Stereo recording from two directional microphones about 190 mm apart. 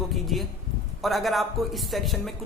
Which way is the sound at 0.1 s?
Centre (ahead or behind).